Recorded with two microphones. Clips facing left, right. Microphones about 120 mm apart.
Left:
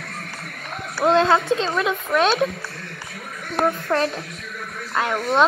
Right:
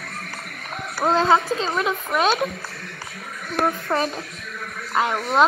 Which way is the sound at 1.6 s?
10° right (ahead or behind).